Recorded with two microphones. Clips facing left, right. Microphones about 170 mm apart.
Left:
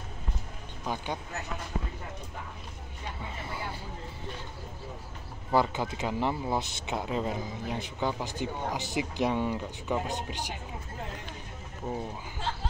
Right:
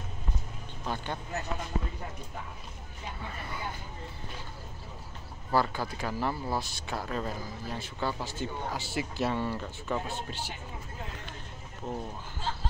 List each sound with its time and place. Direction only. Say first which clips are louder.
0.8 s speech: left 1 dB; 10° left (ahead or behind)
3.3 s speech: left 1 dB; 25° left (ahead or behind)
5.5 s speech: left 2 dB; 20° left (ahead or behind)
11.9 s speech: left 2 dB; 10° left (ahead or behind)